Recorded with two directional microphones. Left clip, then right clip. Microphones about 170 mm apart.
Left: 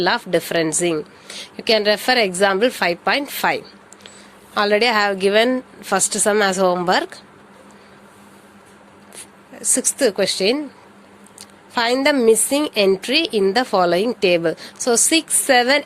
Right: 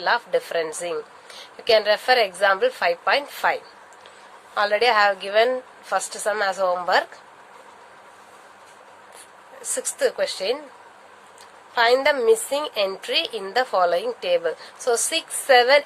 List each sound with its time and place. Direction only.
0.0 s a woman's voice: 45° left (ahead or behind)
9.7 s a woman's voice: 40° left (ahead or behind)
11.7 s a woman's voice: 45° left (ahead or behind)